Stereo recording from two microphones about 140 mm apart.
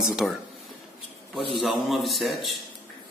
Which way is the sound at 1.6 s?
Centre (ahead or behind).